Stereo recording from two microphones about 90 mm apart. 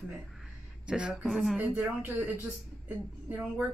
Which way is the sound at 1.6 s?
20° right (ahead or behind).